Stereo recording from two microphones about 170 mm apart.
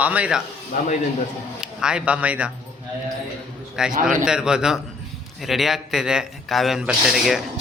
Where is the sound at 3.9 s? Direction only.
55° right (ahead or behind).